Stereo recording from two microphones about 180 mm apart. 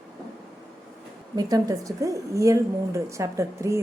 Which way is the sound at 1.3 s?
20° right (ahead or behind).